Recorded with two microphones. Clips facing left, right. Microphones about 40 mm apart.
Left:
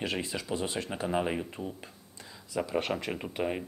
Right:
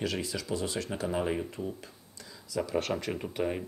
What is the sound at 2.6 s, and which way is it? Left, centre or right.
Speech, left.